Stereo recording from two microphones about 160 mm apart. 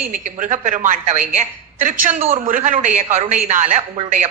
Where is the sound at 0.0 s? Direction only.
55° right (ahead or behind).